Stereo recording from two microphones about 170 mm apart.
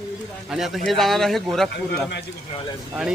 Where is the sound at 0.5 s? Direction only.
Centre (ahead or behind).